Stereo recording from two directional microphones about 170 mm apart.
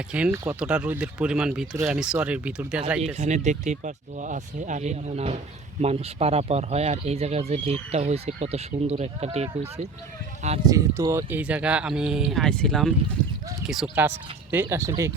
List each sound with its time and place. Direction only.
0.1 s speech: 10° right (ahead or behind)
3.0 s speech: 40° right (ahead or behind)
10.7 s speech: 20° right (ahead or behind)